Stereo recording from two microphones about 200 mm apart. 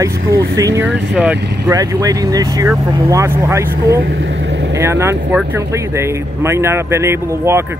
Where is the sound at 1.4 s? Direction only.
55° right (ahead or behind).